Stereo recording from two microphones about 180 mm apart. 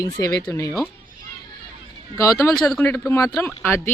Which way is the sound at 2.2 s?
15° left (ahead or behind).